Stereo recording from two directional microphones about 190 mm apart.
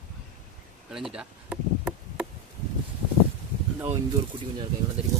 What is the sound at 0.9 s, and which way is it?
Chop, centre (ahead or behind).